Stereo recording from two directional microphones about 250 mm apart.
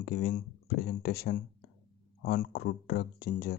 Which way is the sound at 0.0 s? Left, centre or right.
Left.